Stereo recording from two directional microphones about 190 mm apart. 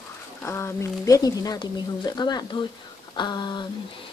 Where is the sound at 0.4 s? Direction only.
15° left (ahead or behind).